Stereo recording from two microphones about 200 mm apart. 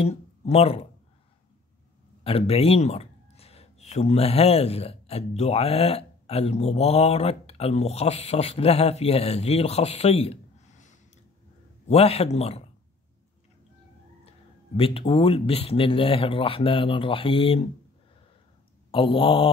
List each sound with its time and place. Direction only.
0.0 s speech: 30° left (ahead or behind)
2.2 s speech: 30° left (ahead or behind)
14.8 s speech: 25° left (ahead or behind)
18.9 s speech: 25° left (ahead or behind)